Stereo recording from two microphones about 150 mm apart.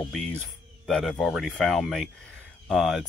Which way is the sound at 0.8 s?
Centre (ahead or behind).